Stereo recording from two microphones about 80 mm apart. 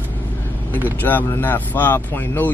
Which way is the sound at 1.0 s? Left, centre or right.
Left.